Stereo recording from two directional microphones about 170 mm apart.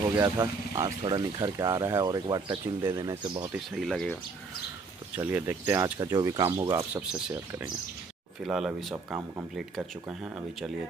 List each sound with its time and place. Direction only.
0.2 s speech: 20° right (ahead or behind)
3.5 s speech: centre (ahead or behind)
5.1 s speech: 10° right (ahead or behind)
6.9 s speech: 5° right (ahead or behind)
8.5 s speech: 5° right (ahead or behind)